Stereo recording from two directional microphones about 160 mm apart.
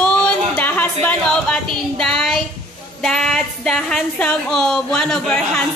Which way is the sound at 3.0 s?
5° left (ahead or behind).